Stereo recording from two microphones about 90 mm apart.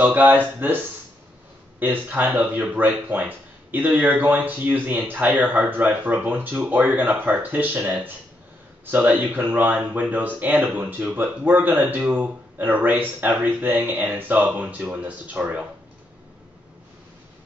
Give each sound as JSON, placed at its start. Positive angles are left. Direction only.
{"t": 0.0, "sound": "speech", "side_deg": -20}
{"t": 1.8, "sound": "speech", "side_deg": -20}